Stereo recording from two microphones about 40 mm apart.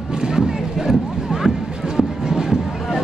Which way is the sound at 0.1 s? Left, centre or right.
Centre.